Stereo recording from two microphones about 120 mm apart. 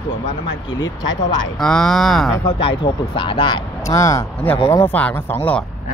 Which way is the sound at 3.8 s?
25° left (ahead or behind).